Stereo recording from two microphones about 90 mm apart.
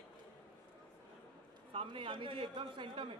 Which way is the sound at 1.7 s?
80° right.